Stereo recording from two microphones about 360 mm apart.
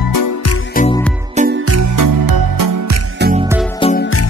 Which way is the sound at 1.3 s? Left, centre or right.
Right.